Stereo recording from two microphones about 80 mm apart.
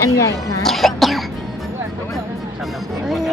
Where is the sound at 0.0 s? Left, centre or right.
Left.